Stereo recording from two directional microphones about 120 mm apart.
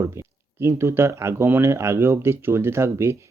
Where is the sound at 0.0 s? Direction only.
25° right (ahead or behind).